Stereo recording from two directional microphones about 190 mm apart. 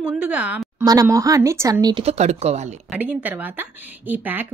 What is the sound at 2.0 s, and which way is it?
Speech, 35° right (ahead or behind).